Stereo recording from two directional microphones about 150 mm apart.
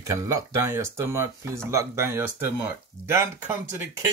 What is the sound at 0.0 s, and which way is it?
Speech, 20° right (ahead or behind).